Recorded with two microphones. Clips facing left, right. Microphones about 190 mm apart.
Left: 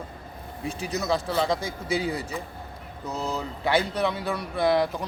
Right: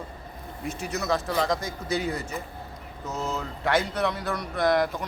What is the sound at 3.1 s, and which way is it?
Speech, 35° left (ahead or behind).